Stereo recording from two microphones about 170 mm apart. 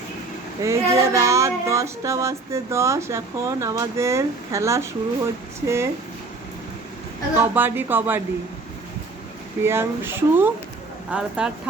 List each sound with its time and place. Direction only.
0.6 s female singing: 15° right (ahead or behind)
7.3 s female singing: 10° right (ahead or behind)
9.6 s female singing: 15° right (ahead or behind)
11.1 s speech: 5° right (ahead or behind)